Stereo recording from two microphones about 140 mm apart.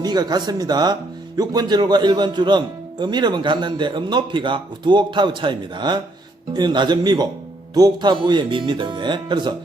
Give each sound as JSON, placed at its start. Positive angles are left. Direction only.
{"t": 0.0, "sound": "a man's voice", "side_deg": -30}